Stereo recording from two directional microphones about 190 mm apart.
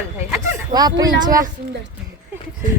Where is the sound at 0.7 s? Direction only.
20° right (ahead or behind).